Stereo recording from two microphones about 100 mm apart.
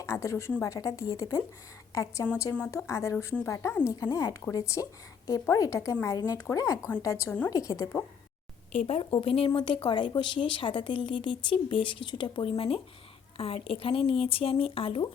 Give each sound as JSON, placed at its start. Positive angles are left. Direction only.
{"t": 0.0, "sound": "a sound", "side_deg": 30}
{"t": 0.6, "sound": "a woman's voice", "side_deg": 35}
{"t": 7.3, "sound": "a woman's voice", "side_deg": 15}
{"t": 7.5, "sound": "a woman's voice", "side_deg": 35}
{"t": 8.9, "sound": "a woman's voice", "side_deg": 75}
{"t": 9.6, "sound": "a woman's voice", "side_deg": 55}